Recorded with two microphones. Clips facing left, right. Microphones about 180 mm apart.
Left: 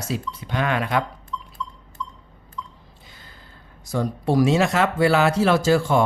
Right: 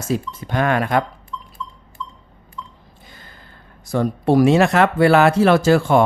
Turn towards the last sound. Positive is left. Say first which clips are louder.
# right 4 dB
turn(degrees=-60)  # may be behind; listen again after turning